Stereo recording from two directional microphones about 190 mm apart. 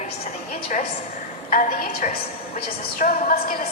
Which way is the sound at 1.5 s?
50° left (ahead or behind).